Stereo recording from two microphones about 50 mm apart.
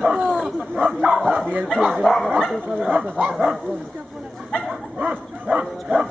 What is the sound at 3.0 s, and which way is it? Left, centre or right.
Speech, right.